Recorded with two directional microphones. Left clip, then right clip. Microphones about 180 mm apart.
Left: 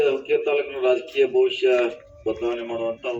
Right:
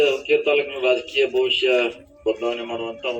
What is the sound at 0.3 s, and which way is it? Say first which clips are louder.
A man's voice: right 3 dB; 30° right (ahead or behind).